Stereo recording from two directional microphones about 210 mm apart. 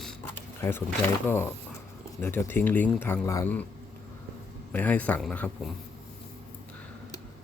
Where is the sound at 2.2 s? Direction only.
10° left (ahead or behind).